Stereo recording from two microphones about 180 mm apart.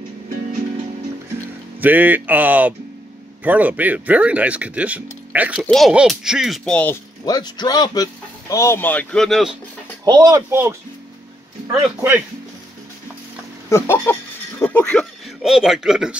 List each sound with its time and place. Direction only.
1.8 s a man's voice: 10° right (ahead or behind); by 7.0 s 5° left (ahead or behind)
7.2 s speech: 25° left (ahead or behind); by 9.6 s centre (ahead or behind)
10.0 s speech: 20° right (ahead or behind)
13.7 s a man's voice: 15° left (ahead or behind); by 16.2 s 5° right (ahead or behind)